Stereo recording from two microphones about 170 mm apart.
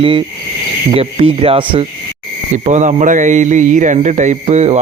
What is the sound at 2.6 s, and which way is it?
Speech, 45° right (ahead or behind).